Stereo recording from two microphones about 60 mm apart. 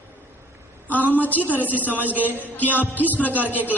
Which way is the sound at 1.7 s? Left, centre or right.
Right.